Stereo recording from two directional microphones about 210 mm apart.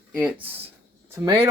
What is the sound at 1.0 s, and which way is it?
Speech, 15° right (ahead or behind).